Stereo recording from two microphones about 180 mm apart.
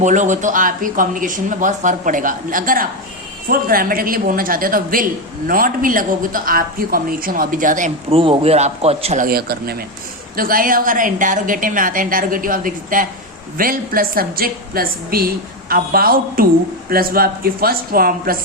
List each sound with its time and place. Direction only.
0.0 s speech: 45° right (ahead or behind)
8.1 s a man's voice: 30° right (ahead or behind)
9.2 s a woman's voice: 60° right (ahead or behind)